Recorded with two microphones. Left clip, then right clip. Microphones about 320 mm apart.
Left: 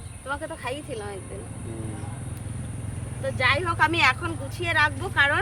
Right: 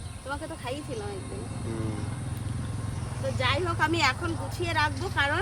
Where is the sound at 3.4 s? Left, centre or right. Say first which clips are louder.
Left 5 dB; centre.